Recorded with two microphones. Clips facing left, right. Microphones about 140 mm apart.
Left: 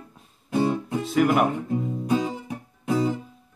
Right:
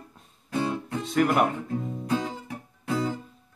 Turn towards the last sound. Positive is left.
turn(degrees=15)  # may be behind; listen again after turning